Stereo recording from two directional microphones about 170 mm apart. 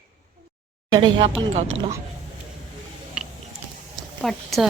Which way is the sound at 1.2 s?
40° right (ahead or behind).